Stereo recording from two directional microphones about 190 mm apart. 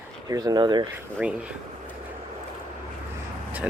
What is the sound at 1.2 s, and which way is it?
Speech, 5° right (ahead or behind).